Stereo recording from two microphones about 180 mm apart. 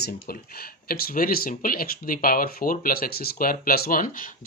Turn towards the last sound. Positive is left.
turn(degrees=50)  # may be behind; listen again after turning